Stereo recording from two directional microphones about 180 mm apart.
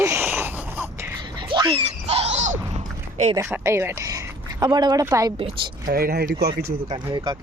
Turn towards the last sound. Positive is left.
turn(degrees=-25)  # may be behind; listen again after turning